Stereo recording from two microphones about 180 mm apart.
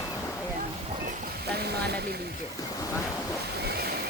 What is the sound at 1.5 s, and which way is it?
Speech, 65° right (ahead or behind).